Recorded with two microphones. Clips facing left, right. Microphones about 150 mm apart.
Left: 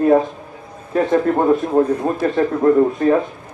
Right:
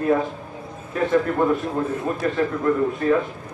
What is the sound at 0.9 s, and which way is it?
A man's voice, 40° left (ahead or behind).